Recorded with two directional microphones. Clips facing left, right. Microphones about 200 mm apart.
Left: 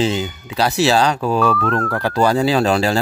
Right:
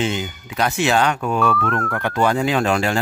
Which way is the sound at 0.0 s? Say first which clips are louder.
Left 4 dB; 30° left (ahead or behind).